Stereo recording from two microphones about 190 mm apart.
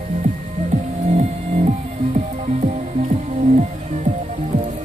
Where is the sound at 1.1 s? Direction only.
35° right (ahead or behind).